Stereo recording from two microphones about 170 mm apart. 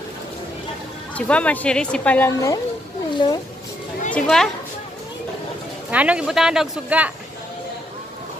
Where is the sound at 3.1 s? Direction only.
25° left (ahead or behind).